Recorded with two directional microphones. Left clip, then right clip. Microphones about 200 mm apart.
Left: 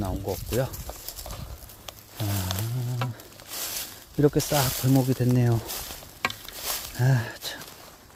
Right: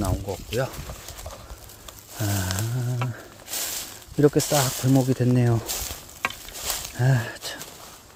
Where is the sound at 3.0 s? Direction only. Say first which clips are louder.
Even; 50° left (ahead or behind).